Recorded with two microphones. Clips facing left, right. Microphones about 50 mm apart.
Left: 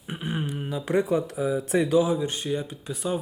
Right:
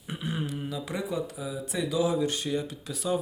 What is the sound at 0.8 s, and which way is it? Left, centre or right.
Speech, left.